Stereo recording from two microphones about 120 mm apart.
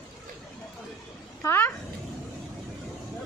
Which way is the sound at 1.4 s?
20° left (ahead or behind).